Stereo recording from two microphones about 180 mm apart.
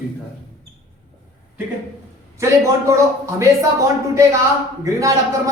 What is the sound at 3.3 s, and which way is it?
A woman's voice, 15° right (ahead or behind).